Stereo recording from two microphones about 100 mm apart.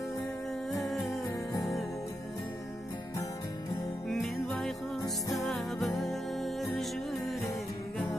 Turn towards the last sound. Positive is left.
turn(degrees=0)  # may be behind; listen again after turning